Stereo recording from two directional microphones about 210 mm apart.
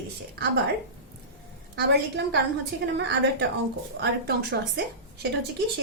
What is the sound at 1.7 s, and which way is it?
A woman's voice, 55° right (ahead or behind).